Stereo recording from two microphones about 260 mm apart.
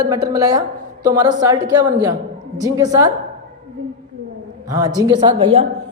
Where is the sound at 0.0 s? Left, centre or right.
Centre.